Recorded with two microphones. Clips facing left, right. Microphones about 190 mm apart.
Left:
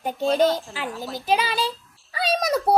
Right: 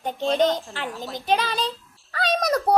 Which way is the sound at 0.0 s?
5° left (ahead or behind).